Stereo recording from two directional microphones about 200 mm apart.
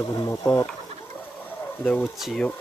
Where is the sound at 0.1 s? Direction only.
15° left (ahead or behind).